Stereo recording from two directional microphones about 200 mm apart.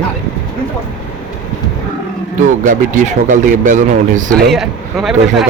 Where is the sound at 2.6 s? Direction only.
40° right (ahead or behind).